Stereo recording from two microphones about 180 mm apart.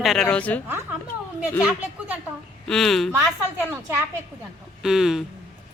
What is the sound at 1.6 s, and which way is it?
Speech, 10° right (ahead or behind).